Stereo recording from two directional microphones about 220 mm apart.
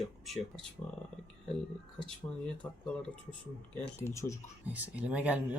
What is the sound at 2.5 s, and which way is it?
Speech, 5° left (ahead or behind).